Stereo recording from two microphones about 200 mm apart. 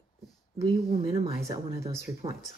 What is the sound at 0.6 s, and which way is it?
Speech, 30° right (ahead or behind).